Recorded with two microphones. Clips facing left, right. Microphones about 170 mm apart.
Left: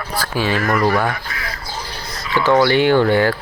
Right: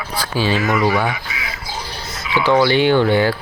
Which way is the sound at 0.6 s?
Centre (ahead or behind).